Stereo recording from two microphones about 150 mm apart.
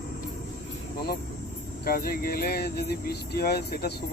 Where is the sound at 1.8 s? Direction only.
80° left.